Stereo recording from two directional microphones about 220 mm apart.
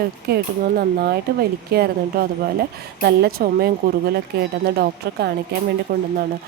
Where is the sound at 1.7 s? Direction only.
45° right (ahead or behind).